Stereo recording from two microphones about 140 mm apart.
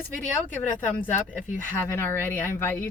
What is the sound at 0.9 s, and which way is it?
A woman's voice, 15° left (ahead or behind).